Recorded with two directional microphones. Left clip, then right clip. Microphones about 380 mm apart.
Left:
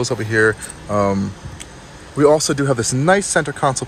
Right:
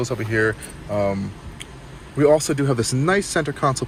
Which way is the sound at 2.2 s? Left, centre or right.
Centre.